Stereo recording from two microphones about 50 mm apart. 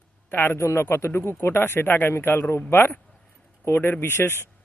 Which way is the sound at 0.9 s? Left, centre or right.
Left.